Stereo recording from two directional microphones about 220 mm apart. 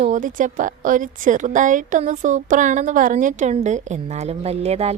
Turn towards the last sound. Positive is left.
turn(degrees=-30)  # may be behind; listen again after turning